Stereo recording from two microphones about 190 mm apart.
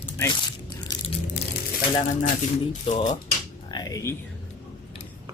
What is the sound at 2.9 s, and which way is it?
Speech, 40° left (ahead or behind).